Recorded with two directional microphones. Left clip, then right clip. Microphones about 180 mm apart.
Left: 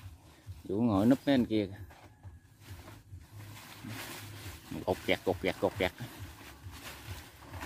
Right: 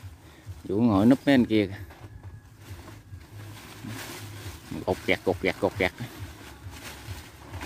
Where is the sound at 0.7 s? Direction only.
5° right (ahead or behind).